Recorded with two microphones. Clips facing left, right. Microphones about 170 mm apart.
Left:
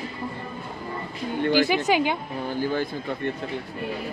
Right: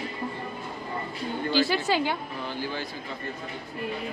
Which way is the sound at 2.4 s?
50° left (ahead or behind).